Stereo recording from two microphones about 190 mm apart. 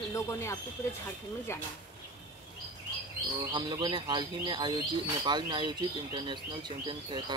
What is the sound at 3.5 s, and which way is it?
Speech, 20° right (ahead or behind).